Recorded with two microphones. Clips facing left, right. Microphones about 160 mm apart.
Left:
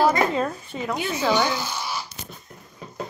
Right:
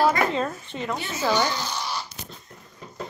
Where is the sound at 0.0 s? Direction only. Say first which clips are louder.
Left 1 dB; 20° left (ahead or behind).